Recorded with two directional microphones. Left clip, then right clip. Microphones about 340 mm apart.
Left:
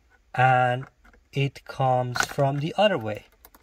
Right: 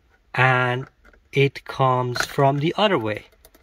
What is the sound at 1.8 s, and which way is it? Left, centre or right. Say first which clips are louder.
Speech: right 2 dB; right.